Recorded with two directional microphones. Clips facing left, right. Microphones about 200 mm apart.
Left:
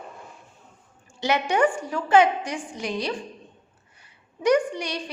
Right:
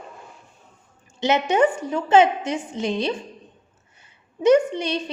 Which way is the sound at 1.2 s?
20° right (ahead or behind).